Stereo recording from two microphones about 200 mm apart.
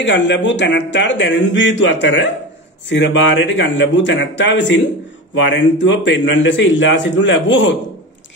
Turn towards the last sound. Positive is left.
turn(degrees=65)  # may be behind; listen again after turning